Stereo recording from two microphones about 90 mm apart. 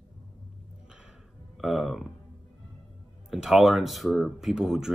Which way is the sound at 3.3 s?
5° right (ahead or behind).